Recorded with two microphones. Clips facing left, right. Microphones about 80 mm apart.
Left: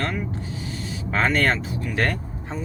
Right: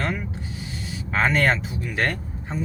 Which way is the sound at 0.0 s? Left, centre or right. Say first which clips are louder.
Even; centre.